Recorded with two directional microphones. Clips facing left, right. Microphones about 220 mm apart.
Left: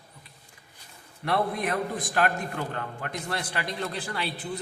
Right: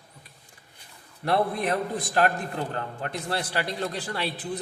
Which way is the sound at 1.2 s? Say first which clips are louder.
Right 2 dB; 35° right (ahead or behind).